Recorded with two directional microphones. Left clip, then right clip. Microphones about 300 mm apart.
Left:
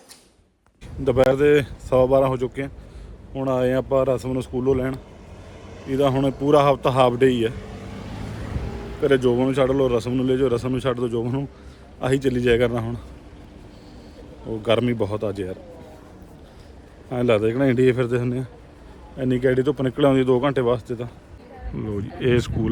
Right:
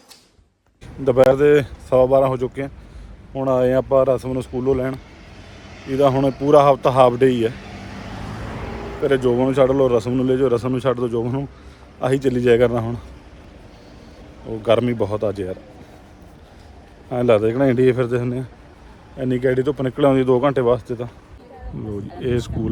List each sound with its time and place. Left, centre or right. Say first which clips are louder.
1.0 s speech: right 4 dB; centre
8.4 s a sound: right 5 dB; right
9.0 s a man's voice: right 1 dB; centre
14.6 s speech: right 3 dB; centre
17.1 s speech: right 4 dB; centre
21.8 s speech: left 1 dB; centre